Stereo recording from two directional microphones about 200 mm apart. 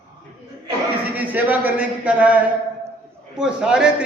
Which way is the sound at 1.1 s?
10° right (ahead or behind).